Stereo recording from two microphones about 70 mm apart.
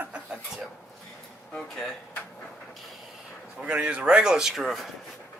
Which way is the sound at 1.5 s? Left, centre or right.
Centre.